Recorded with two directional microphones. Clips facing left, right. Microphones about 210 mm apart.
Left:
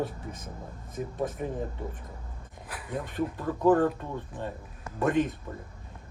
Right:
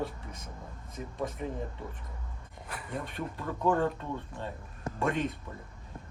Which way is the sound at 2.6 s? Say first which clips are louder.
Left 3 dB; centre (ahead or behind).